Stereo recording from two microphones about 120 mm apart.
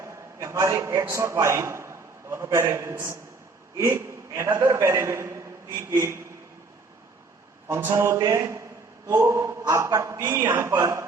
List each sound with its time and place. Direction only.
0.0 s a man's voice: 25° right (ahead or behind)
7.7 s a man's voice: 20° right (ahead or behind)